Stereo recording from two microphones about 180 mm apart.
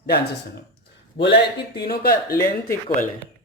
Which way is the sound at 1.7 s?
60° left (ahead or behind).